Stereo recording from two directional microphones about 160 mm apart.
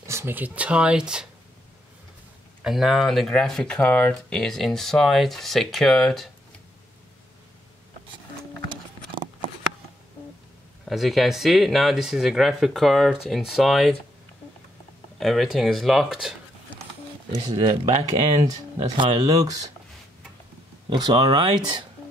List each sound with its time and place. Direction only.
0.0 s speech: 20° right (ahead or behind)
2.6 s speech: centre (ahead or behind)
10.9 s speech: centre (ahead or behind)
15.1 s speech: centre (ahead or behind)
17.3 s speech: 25° right (ahead or behind)
20.9 s speech: 30° right (ahead or behind)